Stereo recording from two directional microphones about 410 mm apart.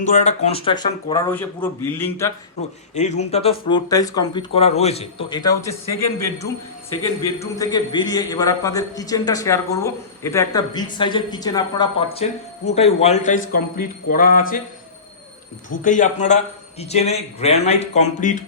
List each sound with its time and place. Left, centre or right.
0.0 s a man's voice: centre
7.3 s a man's voice: centre
15.8 s a man's voice: centre